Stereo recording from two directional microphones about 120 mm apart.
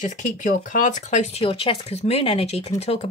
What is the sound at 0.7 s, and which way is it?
Speech, 90° left.